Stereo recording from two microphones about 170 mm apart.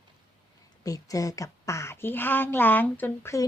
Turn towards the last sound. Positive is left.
turn(degrees=15)  # may be behind; listen again after turning